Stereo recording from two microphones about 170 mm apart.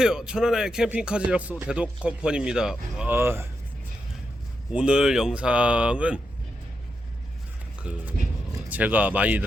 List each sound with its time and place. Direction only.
0.0 s speech: 5° right (ahead or behind)
4.7 s speech: 5° right (ahead or behind)
7.8 s speech: 5° right (ahead or behind)